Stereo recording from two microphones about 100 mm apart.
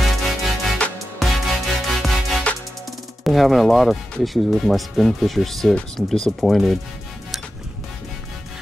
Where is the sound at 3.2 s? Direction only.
Centre (ahead or behind).